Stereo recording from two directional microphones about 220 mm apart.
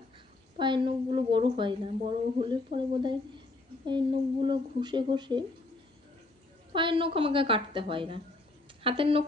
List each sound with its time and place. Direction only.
0.6 s a woman's voice: 20° right (ahead or behind)
6.7 s a woman's voice: 20° right (ahead or behind)